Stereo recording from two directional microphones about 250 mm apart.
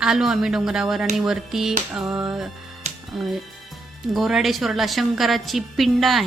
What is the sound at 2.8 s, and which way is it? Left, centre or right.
Music, right.